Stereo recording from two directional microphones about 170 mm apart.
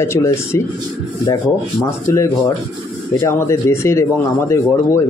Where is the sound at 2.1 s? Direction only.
15° left (ahead or behind).